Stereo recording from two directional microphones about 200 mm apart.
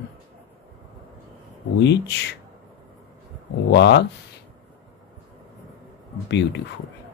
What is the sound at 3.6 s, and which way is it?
Speech, 60° left (ahead or behind).